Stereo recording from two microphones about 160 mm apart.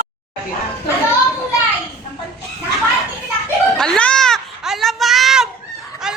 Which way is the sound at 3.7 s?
5° left (ahead or behind).